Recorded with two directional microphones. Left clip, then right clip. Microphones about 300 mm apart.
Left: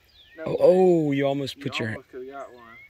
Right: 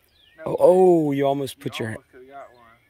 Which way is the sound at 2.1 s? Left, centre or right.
Left.